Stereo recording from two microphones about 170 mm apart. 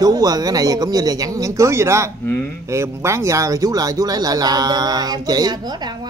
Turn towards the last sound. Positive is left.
turn(degrees=-25)  # may be behind; listen again after turning